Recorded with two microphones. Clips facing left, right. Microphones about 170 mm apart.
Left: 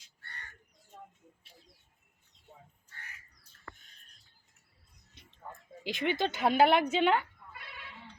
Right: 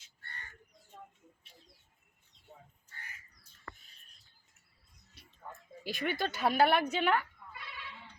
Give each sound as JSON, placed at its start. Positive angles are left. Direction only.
{"t": 5.8, "sound": "a woman's voice", "side_deg": 20}
{"t": 7.5, "sound": "goat", "side_deg": 50}